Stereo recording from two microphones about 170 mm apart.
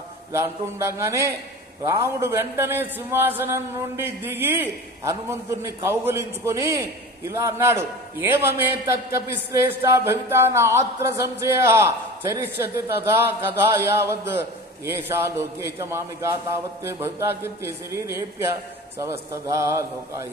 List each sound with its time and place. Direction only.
0.3 s a man's voice: 15° right (ahead or behind)